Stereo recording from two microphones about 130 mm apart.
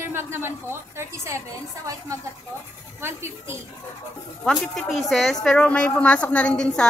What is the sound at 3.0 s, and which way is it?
Speech, 20° right (ahead or behind).